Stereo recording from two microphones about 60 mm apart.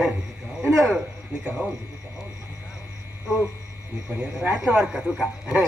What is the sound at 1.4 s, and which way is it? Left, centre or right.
Speech, centre.